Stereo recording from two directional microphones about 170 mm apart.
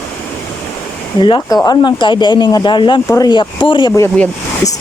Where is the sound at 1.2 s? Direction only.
30° left (ahead or behind).